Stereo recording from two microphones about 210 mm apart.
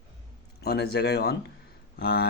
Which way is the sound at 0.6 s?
50° left (ahead or behind).